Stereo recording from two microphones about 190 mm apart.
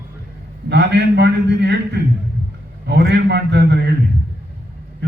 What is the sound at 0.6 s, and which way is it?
A man's voice, 65° right (ahead or behind).